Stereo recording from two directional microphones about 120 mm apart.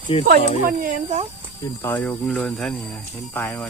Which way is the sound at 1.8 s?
20° left (ahead or behind).